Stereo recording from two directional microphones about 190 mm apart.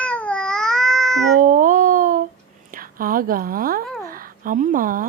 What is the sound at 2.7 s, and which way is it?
A woman's voice, 45° right (ahead or behind).